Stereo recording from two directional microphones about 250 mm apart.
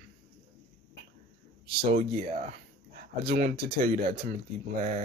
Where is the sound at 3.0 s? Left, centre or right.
Right.